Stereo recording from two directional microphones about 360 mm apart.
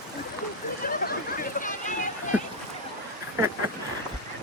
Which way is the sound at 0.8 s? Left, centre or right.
Left.